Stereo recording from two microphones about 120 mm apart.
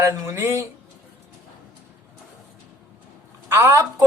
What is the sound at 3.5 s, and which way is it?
Speech, 20° right (ahead or behind).